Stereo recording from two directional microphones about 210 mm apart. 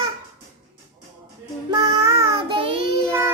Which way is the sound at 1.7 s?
15° right (ahead or behind).